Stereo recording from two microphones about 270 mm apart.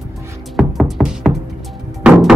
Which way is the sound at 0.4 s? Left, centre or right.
Centre.